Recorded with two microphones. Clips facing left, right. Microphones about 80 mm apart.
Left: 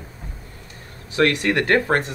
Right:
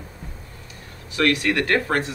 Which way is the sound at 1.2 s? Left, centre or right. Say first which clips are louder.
Left 2 dB; left.